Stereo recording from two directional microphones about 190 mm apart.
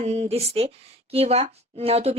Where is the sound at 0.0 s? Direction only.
35° right (ahead or behind).